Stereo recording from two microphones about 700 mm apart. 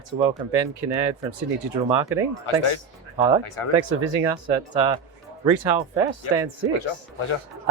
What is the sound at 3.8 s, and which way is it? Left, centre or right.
Speech, right.